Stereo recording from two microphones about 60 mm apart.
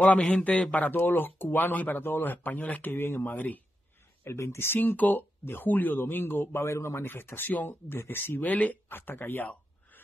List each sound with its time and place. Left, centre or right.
0.6 s speech: left
0.9 s a man's voice: left
2.9 s a man's voice: left
3.3 s speech: left
4.2 s a man's voice: left
8.8 s a man's voice: left